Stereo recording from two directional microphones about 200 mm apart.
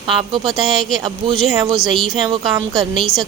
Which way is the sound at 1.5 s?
20° right (ahead or behind).